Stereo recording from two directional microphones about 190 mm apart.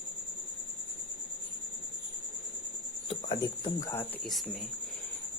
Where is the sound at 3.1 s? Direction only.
25° left (ahead or behind).